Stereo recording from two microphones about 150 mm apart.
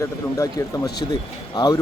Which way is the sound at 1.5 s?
25° left (ahead or behind).